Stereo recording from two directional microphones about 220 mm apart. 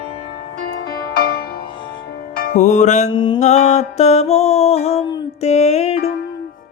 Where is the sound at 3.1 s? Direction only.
20° left (ahead or behind).